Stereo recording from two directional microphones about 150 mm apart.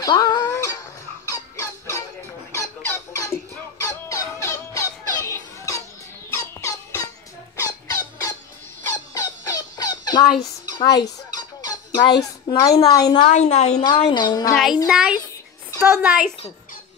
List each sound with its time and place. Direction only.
0.0 s cat: 30° left (ahead or behind)
1.3 s fowl: 20° left (ahead or behind)
3.8 s music: 20° left (ahead or behind)
7.9 s squeak: 20° left (ahead or behind)
8.8 s squawk: 20° left (ahead or behind)
13.3 s a woman's voice: 50° left (ahead or behind)
14.1 s speech: 30° left (ahead or behind)
14.5 s a woman's voice: centre (ahead or behind)